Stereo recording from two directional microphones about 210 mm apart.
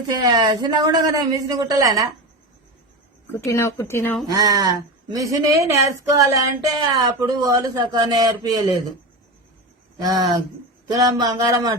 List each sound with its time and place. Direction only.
0.2 s speech: 20° right (ahead or behind)
3.3 s speech: 15° left (ahead or behind)
4.3 s speech: 15° right (ahead or behind)
10.0 s speech: 20° right (ahead or behind)